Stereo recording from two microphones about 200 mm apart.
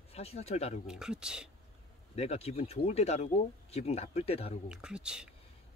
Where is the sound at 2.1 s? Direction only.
30° left (ahead or behind).